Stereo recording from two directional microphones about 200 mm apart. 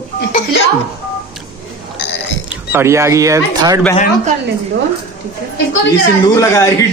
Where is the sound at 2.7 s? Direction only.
15° right (ahead or behind).